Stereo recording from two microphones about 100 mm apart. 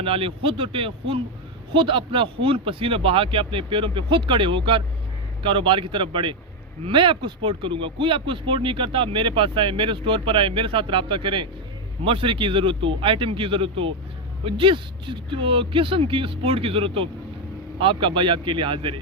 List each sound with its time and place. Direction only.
0.0 s speech: 65° right (ahead or behind)